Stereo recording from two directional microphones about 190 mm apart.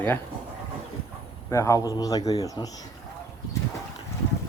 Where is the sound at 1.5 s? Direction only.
15° left (ahead or behind).